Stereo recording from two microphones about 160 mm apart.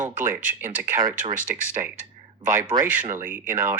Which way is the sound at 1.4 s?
55° right (ahead or behind).